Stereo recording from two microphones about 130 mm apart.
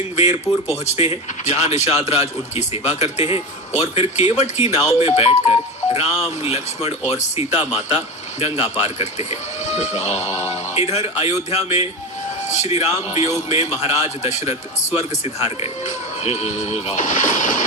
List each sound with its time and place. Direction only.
0.7 s speech: 55° left (ahead or behind); by 17.6 s 75° left (ahead or behind)